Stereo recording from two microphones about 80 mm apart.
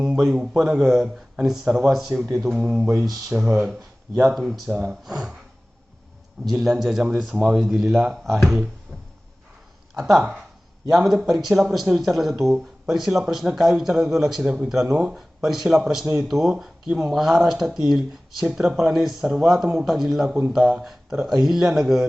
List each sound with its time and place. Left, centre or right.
0.0 s a man's voice: centre
3.2 s a man's voice: centre
4.1 s speech: right
4.4 s speech: centre
6.4 s speech: centre
9.9 s speech: centre